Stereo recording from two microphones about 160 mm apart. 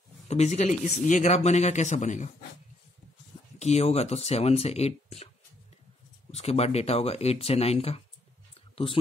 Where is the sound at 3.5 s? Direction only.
45° left (ahead or behind).